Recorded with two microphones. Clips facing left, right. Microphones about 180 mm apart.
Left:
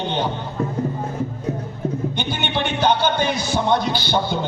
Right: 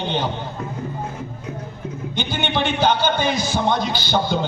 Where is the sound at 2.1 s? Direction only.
55° left (ahead or behind).